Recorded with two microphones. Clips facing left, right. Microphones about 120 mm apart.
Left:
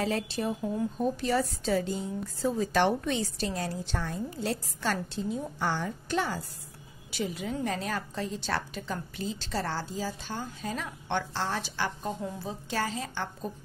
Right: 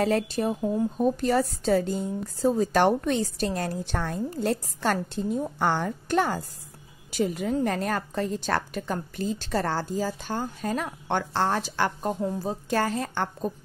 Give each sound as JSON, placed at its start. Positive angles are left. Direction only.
{"t": 0.0, "sound": "a woman's voice", "side_deg": -45}